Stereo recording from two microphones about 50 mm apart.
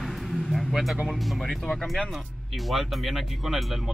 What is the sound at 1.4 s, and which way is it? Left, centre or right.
Speech, centre.